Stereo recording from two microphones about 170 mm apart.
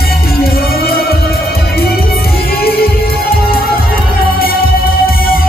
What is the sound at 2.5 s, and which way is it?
Music, 65° left (ahead or behind).